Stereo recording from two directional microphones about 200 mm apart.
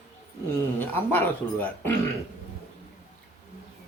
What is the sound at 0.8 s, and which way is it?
Speech, 10° left (ahead or behind).